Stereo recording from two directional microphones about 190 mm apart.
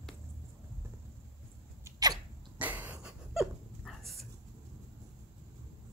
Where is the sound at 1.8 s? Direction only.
20° right (ahead or behind).